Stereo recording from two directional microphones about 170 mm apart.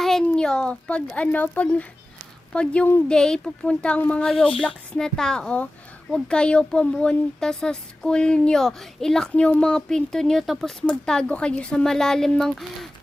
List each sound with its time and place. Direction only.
0.0 s a woman's voice: centre (ahead or behind)